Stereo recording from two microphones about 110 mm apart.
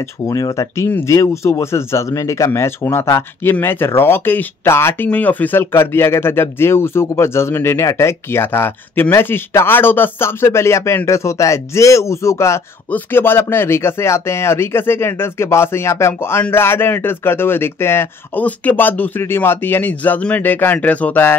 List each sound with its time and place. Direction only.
0.3 s speech: 30° left (ahead or behind)
0.8 s speech: 20° left (ahead or behind)